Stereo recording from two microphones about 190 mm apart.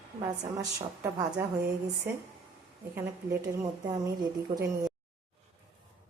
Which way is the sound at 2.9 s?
10° right (ahead or behind).